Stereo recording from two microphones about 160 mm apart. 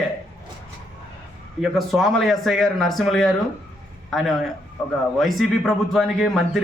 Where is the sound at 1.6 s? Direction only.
Centre (ahead or behind).